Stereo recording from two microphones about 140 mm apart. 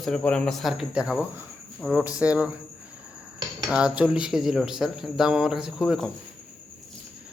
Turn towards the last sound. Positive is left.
turn(degrees=0)  # may be behind; listen again after turning